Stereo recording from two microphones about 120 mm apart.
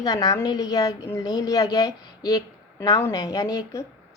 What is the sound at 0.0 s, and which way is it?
A woman's voice, 30° left (ahead or behind).